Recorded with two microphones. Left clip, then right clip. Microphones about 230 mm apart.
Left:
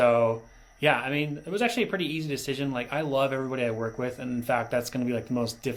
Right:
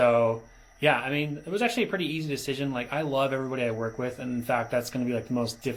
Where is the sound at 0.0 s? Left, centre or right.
Left.